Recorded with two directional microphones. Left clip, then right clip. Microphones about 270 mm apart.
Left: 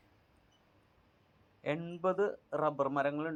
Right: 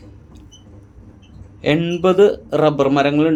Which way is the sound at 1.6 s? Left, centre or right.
Centre.